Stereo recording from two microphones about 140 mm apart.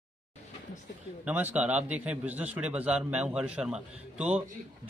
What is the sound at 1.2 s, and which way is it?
Speech, 10° right (ahead or behind).